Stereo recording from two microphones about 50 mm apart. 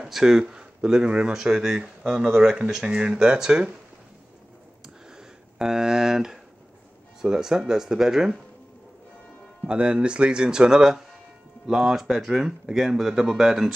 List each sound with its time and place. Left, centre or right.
0.0 s speech: centre
1.3 s speech: centre
5.1 s a sound: centre
7.2 s speech: centre
9.7 s speech: right